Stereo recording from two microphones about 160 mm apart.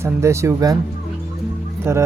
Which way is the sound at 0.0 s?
15° right (ahead or behind).